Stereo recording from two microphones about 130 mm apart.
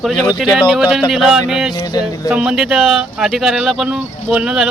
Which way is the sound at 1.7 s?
30° left (ahead or behind).